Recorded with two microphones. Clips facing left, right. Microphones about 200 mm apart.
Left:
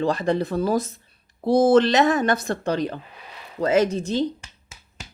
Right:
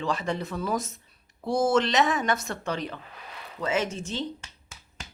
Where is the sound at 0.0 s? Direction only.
35° left (ahead or behind).